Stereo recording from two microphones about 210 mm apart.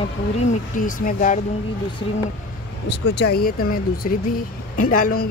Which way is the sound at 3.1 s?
50° left (ahead or behind).